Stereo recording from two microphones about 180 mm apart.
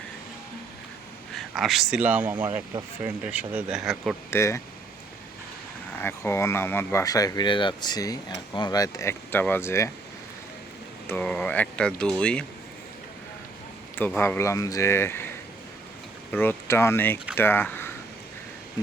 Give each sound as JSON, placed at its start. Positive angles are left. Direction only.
{"t": 1.3, "sound": "speech", "side_deg": 0}
{"t": 4.3, "sound": "speech", "side_deg": 15}
{"t": 6.0, "sound": "speech", "side_deg": 15}
{"t": 11.0, "sound": "speech", "side_deg": 10}
{"t": 13.9, "sound": "speech", "side_deg": 10}
{"t": 16.3, "sound": "speech", "side_deg": 10}